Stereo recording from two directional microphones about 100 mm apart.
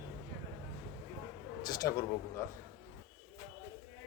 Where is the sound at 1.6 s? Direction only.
40° left (ahead or behind).